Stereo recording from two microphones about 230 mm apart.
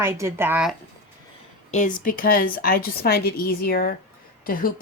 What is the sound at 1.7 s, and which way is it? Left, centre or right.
Speech, left.